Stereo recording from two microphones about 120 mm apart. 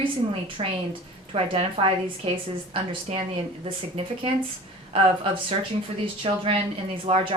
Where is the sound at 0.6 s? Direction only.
50° right (ahead or behind).